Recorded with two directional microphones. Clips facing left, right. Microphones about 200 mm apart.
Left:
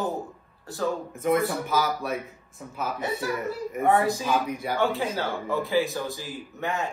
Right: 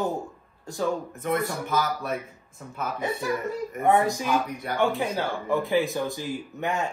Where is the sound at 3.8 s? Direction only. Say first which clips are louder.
Even; 15° right (ahead or behind).